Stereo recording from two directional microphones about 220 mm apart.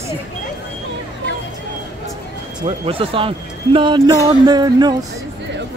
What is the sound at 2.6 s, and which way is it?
Speech, 25° right (ahead or behind).